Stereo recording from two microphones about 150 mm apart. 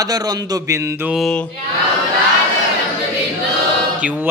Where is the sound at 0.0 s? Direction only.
25° right (ahead or behind).